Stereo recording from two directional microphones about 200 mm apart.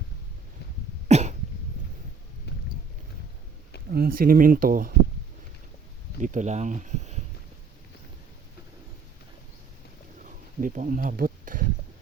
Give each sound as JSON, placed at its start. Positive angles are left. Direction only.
{"t": 1.0, "sound": "cough", "side_deg": -35}
{"t": 2.5, "sound": "boat", "side_deg": 55}
{"t": 3.9, "sound": "speech", "side_deg": -50}
{"t": 6.2, "sound": "speech", "side_deg": -40}
{"t": 10.2, "sound": "a sound", "side_deg": -40}